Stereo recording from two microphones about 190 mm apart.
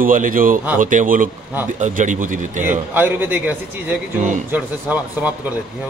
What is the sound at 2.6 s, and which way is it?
A man's voice, 10° right (ahead or behind).